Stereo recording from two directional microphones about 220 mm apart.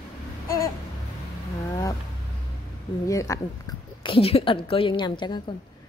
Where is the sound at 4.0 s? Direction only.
25° left (ahead or behind).